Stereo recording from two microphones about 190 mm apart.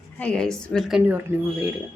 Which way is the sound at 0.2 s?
5° left (ahead or behind).